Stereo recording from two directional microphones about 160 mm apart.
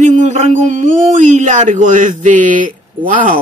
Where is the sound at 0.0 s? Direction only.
45° right (ahead or behind).